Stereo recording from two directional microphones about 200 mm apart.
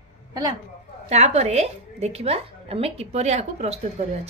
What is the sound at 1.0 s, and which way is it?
A woman's voice, 35° right (ahead or behind).